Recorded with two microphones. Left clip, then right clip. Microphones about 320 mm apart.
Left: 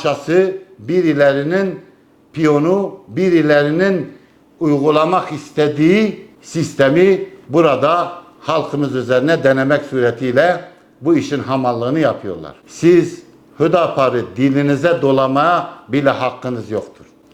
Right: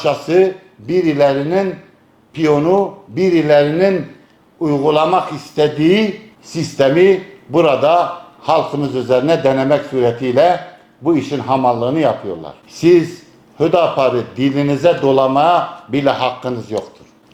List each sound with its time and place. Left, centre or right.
0.0 s a man's voice: left